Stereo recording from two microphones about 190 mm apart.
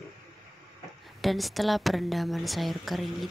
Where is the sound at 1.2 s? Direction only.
Centre (ahead or behind).